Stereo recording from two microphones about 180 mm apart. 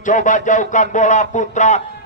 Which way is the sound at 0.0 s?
45° left (ahead or behind).